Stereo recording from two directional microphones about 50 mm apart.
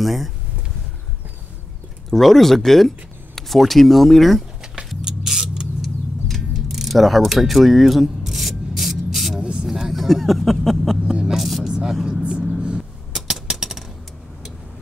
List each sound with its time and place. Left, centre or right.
0.0 s speech: centre
2.0 s speech: centre
5.0 s a sound: centre
5.8 s mechanisms: centre
9.4 s a sound: centre
9.7 s speech: centre
11.6 s speech: centre
12.0 s vehicle: centre
13.1 s a sound: centre